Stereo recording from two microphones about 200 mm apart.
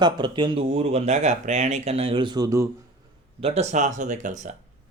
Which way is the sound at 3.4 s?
35° right (ahead or behind).